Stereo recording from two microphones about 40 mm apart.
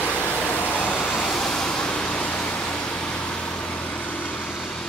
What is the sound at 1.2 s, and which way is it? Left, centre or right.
Vehicle, centre.